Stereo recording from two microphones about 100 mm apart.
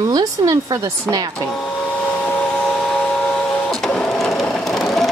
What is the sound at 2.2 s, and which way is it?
Printer, 5° left (ahead or behind).